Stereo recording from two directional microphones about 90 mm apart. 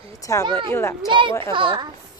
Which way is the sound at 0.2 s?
35° left (ahead or behind).